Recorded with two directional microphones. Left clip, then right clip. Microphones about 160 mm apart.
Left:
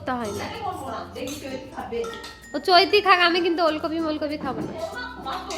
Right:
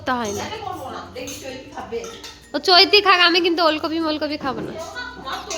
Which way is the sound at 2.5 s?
20° right (ahead or behind).